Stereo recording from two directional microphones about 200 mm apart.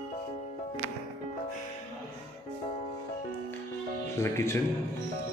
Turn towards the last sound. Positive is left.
turn(degrees=15)  # may be behind; listen again after turning